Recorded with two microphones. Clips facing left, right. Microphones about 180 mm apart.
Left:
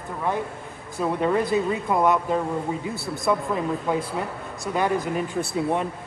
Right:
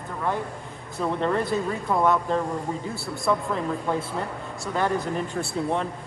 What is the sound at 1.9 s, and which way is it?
Speech, 20° left (ahead or behind).